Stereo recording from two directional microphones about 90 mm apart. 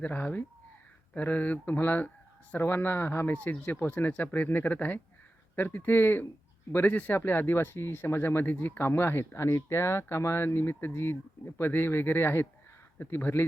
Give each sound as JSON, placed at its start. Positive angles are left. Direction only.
{"t": 0.0, "sound": "speech", "side_deg": 20}